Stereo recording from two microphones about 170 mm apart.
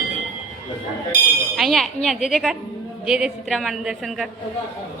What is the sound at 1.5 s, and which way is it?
A woman's voice, centre (ahead or behind).